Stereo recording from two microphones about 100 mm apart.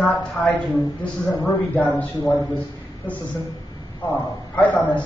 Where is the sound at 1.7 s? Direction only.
15° left (ahead or behind).